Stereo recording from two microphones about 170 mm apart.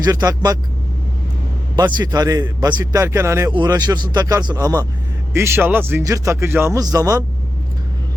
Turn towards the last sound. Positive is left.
turn(degrees=-20)  # may be behind; listen again after turning